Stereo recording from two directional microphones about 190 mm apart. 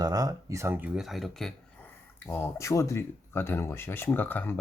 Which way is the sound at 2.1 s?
10° left (ahead or behind).